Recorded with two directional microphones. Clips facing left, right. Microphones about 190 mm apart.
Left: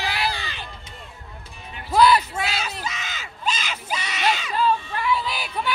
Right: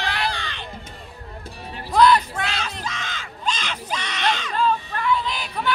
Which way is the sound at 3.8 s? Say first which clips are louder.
Left 1 dB; 5° left (ahead or behind).